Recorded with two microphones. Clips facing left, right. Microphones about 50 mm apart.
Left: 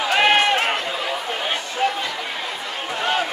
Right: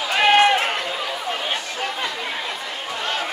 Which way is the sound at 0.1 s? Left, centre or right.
Centre.